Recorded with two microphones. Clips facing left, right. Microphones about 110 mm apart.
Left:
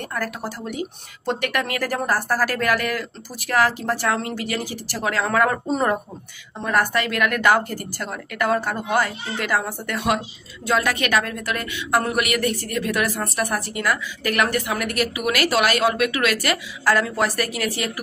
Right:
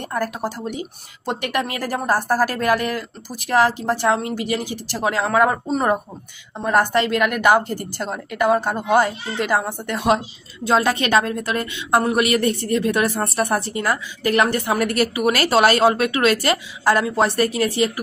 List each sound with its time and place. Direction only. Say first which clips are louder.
0.1 s a woman's voice: right 6 dB; 20° right (ahead or behind)
6.6 s a woman's voice: right 3 dB; 25° right (ahead or behind)